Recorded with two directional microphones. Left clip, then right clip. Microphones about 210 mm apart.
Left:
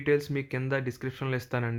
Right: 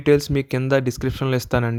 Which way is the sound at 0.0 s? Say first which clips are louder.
Right 9 dB; 40° right (ahead or behind).